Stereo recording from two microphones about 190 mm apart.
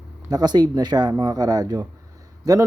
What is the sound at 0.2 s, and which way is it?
Speech, 20° right (ahead or behind).